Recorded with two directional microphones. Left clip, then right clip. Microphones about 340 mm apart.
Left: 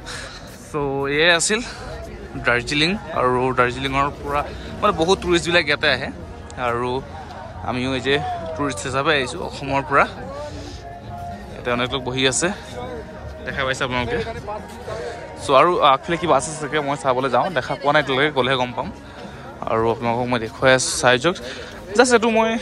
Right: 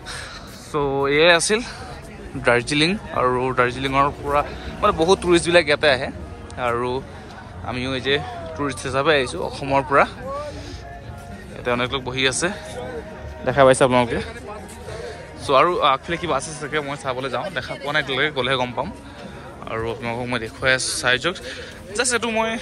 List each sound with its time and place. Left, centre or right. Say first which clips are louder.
0.8 s a man's voice: right 2 dB; centre
11.6 s a man's voice: even; centre
13.5 s a man's voice: right 9 dB; centre